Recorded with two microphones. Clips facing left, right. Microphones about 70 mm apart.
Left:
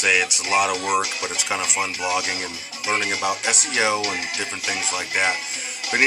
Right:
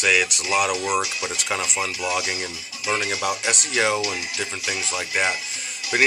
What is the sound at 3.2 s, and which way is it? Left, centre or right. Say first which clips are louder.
Speech: left 1 dB; centre.